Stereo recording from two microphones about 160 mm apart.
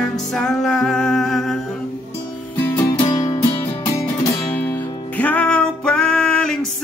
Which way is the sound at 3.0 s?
25° left (ahead or behind).